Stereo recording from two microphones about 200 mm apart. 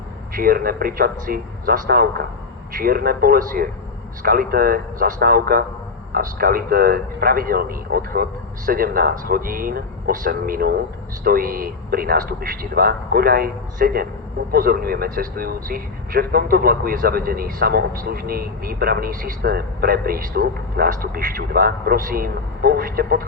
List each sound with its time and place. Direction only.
0.3 s speech: 45° right (ahead or behind)